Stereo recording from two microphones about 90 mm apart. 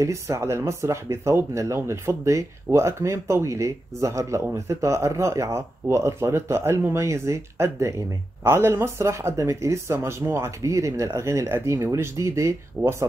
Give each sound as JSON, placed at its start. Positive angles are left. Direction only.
{"t": 0.0, "sound": "speech", "side_deg": -35}